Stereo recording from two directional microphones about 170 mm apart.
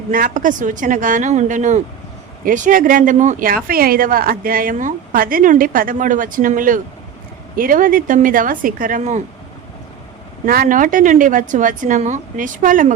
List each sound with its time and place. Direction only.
0.1 s speech: 50° right (ahead or behind)
10.4 s speech: 55° right (ahead or behind)